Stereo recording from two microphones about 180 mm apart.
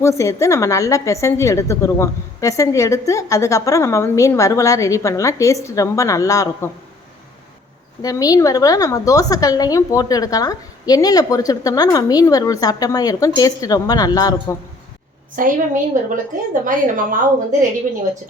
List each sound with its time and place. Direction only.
0.0 s a woman's voice: 15° left (ahead or behind)
8.0 s a woman's voice: 20° left (ahead or behind)
15.4 s a woman's voice: 45° right (ahead or behind)